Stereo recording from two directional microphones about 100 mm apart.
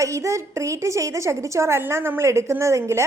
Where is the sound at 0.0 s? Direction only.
30° right (ahead or behind).